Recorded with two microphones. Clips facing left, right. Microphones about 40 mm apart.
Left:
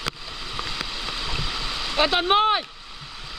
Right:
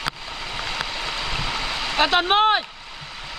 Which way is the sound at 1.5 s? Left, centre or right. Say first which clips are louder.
Right 3 dB; right.